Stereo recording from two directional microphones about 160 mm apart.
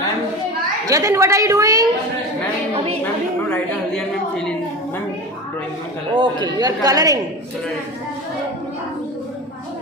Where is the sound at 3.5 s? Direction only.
5° left (ahead or behind).